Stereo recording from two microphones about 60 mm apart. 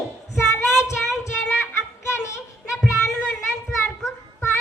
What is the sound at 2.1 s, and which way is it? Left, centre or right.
Child singing, left.